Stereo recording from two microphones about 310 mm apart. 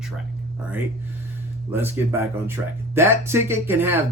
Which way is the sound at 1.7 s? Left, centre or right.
Centre.